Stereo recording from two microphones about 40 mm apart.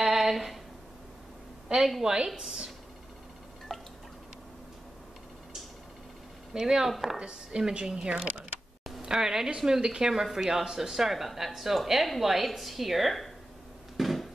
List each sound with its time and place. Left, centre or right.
0.0 s a sound: centre
1.7 s a woman's voice: right
3.7 s drip: centre
6.5 s a woman's voice: centre
6.9 s speech: centre
7.2 s a woman's voice: right; by 13.3 s centre
13.9 s a sound: centre